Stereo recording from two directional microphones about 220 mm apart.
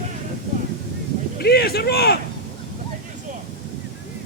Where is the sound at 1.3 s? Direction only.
45° left (ahead or behind).